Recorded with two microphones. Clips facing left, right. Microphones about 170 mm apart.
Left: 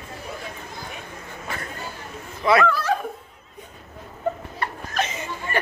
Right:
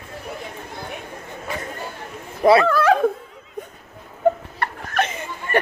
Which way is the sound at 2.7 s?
60° right (ahead or behind).